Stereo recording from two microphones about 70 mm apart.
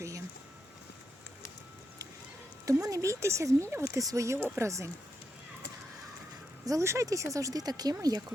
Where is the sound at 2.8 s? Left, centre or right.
Right.